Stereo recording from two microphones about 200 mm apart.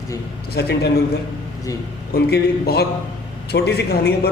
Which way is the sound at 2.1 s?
50° left (ahead or behind).